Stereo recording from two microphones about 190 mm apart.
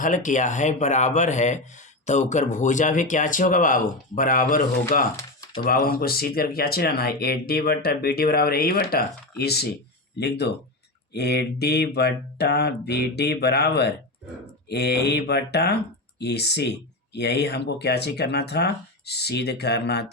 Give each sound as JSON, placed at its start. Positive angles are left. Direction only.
{"t": 0.0, "sound": "speech", "side_deg": 40}